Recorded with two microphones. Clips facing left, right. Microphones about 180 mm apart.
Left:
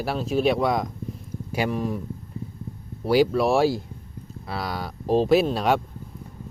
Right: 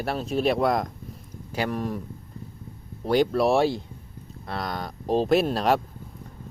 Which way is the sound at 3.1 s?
5° left (ahead or behind).